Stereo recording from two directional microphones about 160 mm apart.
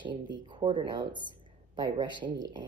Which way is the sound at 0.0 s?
30° right (ahead or behind).